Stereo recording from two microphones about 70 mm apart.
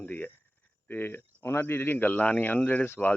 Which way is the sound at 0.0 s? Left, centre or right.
Left.